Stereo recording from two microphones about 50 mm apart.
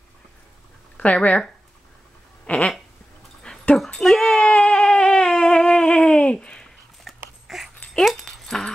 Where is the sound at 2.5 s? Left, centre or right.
Left.